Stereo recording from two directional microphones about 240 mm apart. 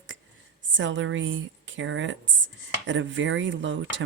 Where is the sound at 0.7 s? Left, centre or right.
Right.